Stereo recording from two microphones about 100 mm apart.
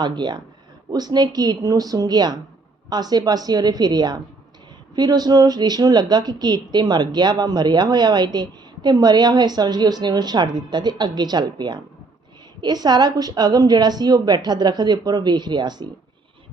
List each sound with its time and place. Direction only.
0.0 s a woman's voice: 45° right (ahead or behind)